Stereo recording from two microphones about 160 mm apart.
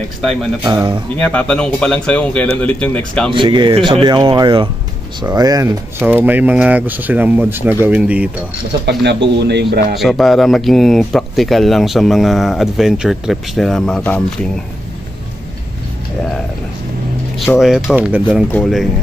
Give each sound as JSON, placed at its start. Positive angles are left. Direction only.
{"t": 0.2, "sound": "speech", "side_deg": 0}
{"t": 0.7, "sound": "speech", "side_deg": -25}
{"t": 1.1, "sound": "speech", "side_deg": 10}
{"t": 3.3, "sound": "speech", "side_deg": -30}
{"t": 8.8, "sound": "speech", "side_deg": -90}
{"t": 9.9, "sound": "speech", "side_deg": 0}
{"t": 17.6, "sound": "speech", "side_deg": 0}